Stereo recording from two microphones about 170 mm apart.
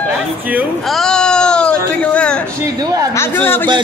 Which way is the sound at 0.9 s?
Centre (ahead or behind).